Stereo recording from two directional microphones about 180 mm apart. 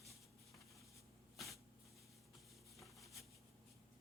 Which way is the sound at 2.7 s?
Centre (ahead or behind).